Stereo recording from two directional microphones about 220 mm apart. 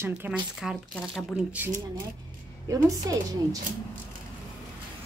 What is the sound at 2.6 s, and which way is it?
Speech, 15° right (ahead or behind).